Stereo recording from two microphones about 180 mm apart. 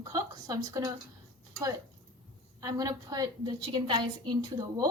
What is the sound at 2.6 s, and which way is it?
A woman's voice, 20° right (ahead or behind).